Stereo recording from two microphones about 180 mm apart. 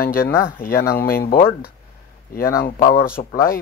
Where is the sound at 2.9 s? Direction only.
55° left (ahead or behind).